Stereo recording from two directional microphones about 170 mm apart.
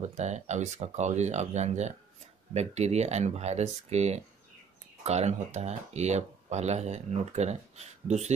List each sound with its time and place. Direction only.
0.0 s speech: 40° right (ahead or behind)